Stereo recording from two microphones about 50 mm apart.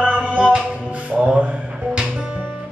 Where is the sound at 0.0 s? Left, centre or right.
Right.